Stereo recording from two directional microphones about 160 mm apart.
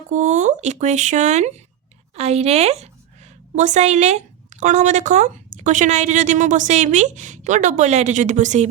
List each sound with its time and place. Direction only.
0.1 s a woman's voice: 50° right (ahead or behind)